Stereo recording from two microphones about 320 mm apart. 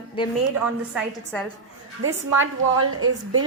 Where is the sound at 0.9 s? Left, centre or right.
Centre.